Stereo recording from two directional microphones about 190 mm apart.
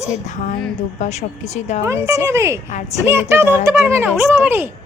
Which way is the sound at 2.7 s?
40° left (ahead or behind).